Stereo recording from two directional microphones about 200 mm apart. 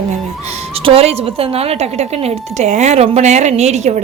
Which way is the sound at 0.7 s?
25° right (ahead or behind).